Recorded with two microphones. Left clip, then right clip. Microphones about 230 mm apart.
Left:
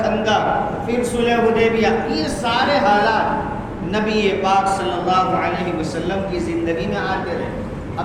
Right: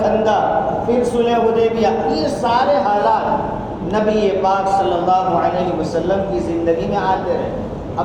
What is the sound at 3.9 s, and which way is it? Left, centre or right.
Speech, left.